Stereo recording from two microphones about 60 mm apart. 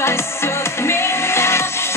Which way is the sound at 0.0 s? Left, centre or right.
Left.